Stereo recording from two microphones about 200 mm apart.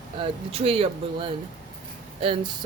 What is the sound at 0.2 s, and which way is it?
Speech, 30° right (ahead or behind).